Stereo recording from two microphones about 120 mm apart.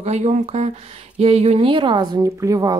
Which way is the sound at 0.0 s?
70° right (ahead or behind).